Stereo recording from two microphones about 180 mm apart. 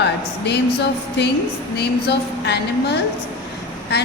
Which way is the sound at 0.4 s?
70° left (ahead or behind).